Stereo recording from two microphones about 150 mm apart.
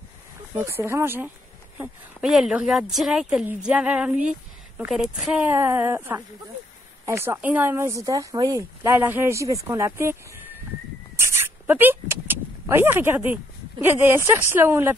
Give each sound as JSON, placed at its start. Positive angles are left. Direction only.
{"t": 0.6, "sound": "speech", "side_deg": -15}
{"t": 2.2, "sound": "a woman's voice", "side_deg": -5}
{"t": 5.5, "sound": "speech", "side_deg": -15}